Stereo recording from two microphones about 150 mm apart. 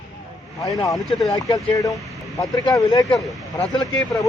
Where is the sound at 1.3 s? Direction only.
25° left (ahead or behind).